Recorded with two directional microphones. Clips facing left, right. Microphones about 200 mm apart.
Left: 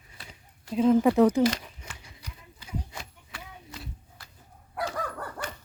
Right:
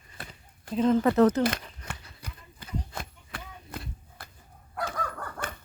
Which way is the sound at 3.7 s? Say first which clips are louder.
Right 4 dB; 55° right (ahead or behind).